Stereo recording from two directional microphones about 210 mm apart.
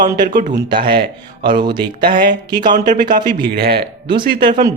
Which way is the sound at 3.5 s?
50° right (ahead or behind).